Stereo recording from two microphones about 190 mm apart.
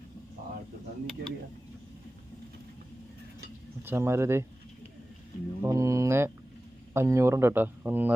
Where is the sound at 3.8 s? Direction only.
10° right (ahead or behind).